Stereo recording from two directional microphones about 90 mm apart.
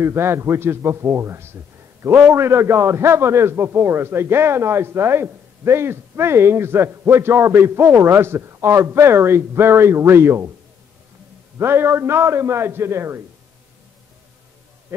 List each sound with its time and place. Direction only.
0.0 s a man's voice: 30° right (ahead or behind)
11.5 s a man's voice: 25° right (ahead or behind)
14.9 s a man's voice: 25° right (ahead or behind)